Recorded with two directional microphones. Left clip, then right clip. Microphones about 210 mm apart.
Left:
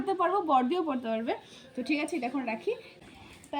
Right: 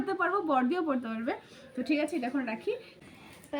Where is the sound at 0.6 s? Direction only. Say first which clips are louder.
Left 1 dB; 30° right (ahead or behind).